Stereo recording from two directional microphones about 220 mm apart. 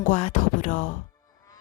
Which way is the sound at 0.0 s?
35° left (ahead or behind).